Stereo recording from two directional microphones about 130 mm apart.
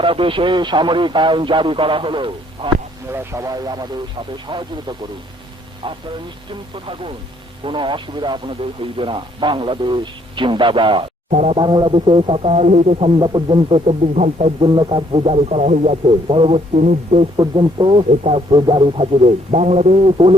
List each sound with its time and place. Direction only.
0.0 s a man's voice: 40° right (ahead or behind)
3.1 s a man's voice: 20° right (ahead or behind); by 4.9 s 35° right (ahead or behind)
6.5 s a man's voice: 40° right (ahead or behind)
11.3 s speech: 60° right (ahead or behind)
11.5 s a man's voice: 35° right (ahead or behind); by 14.7 s 50° right (ahead or behind)
14.8 s a man's voice: 40° right (ahead or behind); by 16.0 s 60° right (ahead or behind)
16.0 s a man's voice: 40° right (ahead or behind)
16.7 s speech: 60° right (ahead or behind)
17.3 s a man's voice: 35° right (ahead or behind)